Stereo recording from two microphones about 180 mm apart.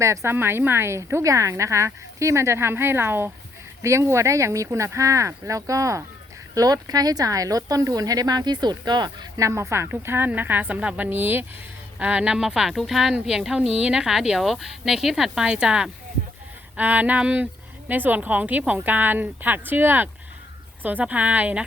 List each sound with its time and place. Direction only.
0.0 s a woman's voice: 15° right (ahead or behind)